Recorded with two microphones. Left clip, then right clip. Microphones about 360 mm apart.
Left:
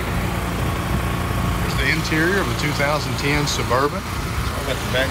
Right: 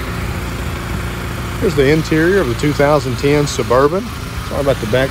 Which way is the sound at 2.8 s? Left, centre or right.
Centre.